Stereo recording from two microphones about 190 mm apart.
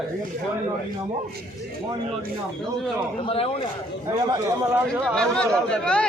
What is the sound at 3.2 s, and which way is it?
Speech, 30° left (ahead or behind).